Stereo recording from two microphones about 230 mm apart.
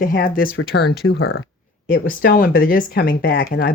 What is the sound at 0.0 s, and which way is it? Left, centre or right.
Speech, left.